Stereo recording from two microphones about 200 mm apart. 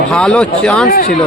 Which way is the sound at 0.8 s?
45° left (ahead or behind).